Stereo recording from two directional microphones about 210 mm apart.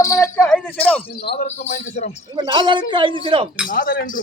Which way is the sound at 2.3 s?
20° right (ahead or behind).